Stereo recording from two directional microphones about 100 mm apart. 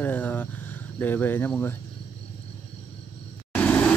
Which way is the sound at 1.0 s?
15° left (ahead or behind).